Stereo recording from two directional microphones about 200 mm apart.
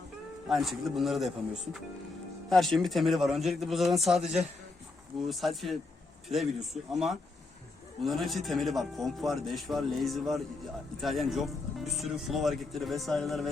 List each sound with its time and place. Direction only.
0.4 s speech: centre (ahead or behind)
2.5 s speech: centre (ahead or behind)